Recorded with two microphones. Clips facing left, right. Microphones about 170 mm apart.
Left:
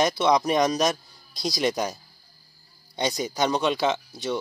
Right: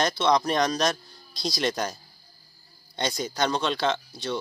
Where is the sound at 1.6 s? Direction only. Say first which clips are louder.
Left 3 dB; centre (ahead or behind).